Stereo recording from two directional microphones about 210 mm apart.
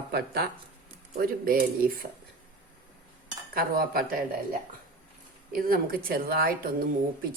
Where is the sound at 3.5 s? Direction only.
45° right (ahead or behind).